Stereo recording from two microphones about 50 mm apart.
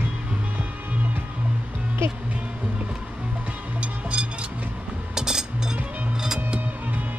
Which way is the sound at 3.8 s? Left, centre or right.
Right.